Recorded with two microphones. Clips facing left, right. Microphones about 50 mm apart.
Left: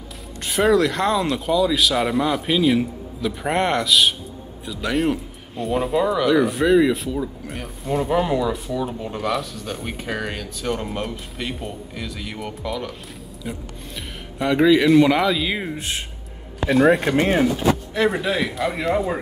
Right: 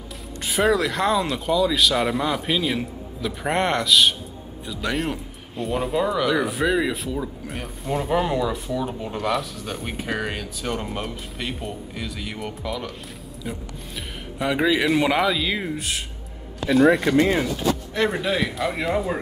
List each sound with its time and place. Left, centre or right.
0.5 s speech: centre
14.4 s speech: centre
15.4 s speech: centre
17.0 s speech: left
17.9 s speech: centre